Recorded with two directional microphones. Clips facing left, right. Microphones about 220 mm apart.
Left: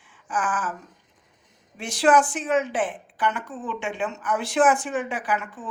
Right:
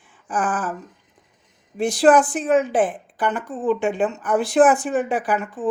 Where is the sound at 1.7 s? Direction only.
35° right (ahead or behind).